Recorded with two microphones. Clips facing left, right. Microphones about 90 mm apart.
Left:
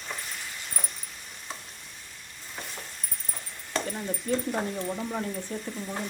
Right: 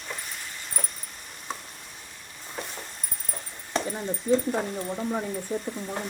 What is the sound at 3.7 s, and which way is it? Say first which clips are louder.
Speech: right 2 dB; 15° right (ahead or behind).